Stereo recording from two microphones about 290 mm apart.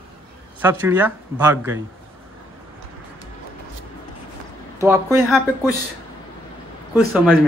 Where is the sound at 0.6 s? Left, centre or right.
Centre.